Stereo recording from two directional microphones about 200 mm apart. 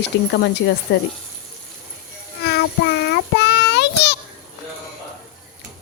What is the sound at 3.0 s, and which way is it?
Child singing, 55° left (ahead or behind).